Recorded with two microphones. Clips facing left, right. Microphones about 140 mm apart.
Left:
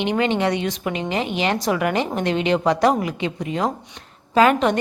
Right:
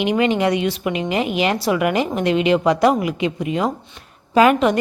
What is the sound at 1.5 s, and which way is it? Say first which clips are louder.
Speech: right 2 dB; 10° right (ahead or behind).